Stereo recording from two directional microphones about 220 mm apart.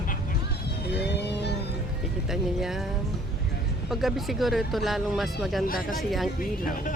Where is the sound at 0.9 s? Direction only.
50° left (ahead or behind).